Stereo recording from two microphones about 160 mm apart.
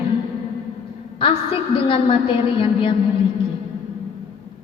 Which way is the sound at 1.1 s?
35° left (ahead or behind).